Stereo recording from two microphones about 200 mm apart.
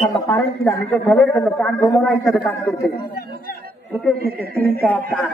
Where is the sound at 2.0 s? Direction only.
Centre (ahead or behind).